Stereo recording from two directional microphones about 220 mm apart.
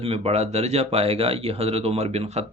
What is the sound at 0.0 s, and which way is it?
A man's voice, 25° right (ahead or behind).